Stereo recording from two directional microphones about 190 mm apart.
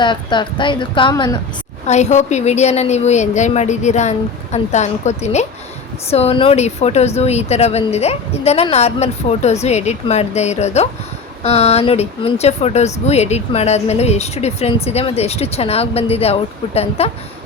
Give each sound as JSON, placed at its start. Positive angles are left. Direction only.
{"t": 0.0, "sound": "speech", "side_deg": 25}
{"t": 1.9, "sound": "speech", "side_deg": 35}